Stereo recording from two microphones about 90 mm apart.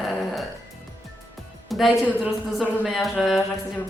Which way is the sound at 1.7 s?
Centre (ahead or behind).